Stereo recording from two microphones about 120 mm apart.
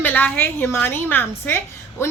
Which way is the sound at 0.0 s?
15° left (ahead or behind).